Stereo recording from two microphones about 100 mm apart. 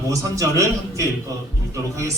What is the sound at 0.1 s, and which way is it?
Speech, 35° right (ahead or behind).